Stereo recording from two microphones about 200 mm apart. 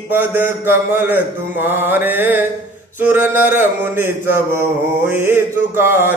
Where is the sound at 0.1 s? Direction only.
10° right (ahead or behind).